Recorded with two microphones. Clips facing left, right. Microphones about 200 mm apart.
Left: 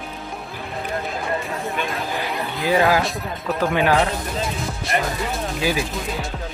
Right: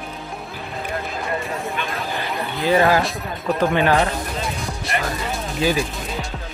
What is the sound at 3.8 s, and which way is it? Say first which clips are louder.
Speech: left 1 dB; centre (ahead or behind).